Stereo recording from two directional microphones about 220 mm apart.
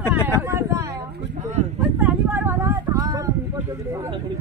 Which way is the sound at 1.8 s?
5° right (ahead or behind).